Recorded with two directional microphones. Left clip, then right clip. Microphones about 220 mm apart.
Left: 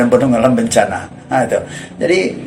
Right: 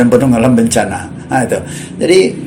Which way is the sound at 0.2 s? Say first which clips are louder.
Right 1 dB; 40° right (ahead or behind).